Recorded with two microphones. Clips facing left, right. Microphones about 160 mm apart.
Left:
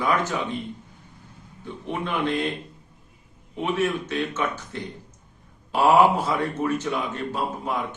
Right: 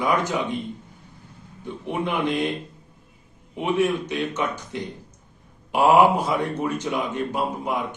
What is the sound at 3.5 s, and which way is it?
Speech, 15° right (ahead or behind).